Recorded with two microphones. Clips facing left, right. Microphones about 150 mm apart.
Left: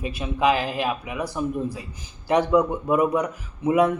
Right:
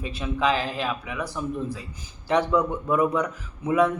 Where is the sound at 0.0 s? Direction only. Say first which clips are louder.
Left 3 dB; 15° left (ahead or behind).